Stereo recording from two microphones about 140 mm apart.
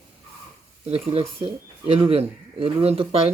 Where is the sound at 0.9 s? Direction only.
40° right (ahead or behind).